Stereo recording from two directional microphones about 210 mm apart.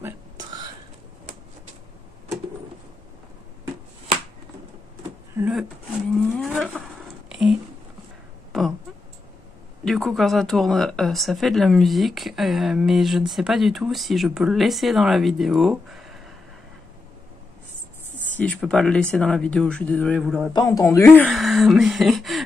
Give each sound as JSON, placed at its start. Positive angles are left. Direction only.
{"t": 0.0, "sound": "a sound", "side_deg": -20}
{"t": 5.4, "sound": "speech", "side_deg": 0}
{"t": 7.2, "sound": "a sound", "side_deg": -5}
{"t": 9.8, "sound": "speech", "side_deg": 0}
{"t": 18.1, "sound": "speech", "side_deg": 5}
{"t": 20.5, "sound": "speech", "side_deg": 15}